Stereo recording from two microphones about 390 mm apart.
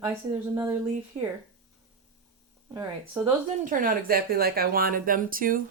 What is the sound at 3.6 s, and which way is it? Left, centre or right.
Speech, right.